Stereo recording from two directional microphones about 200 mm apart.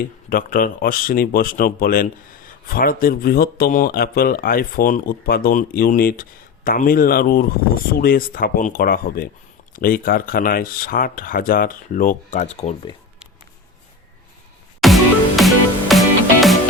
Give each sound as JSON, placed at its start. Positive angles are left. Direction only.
{"t": 0.3, "sound": "speech", "side_deg": 45}
{"t": 14.8, "sound": "music", "side_deg": 0}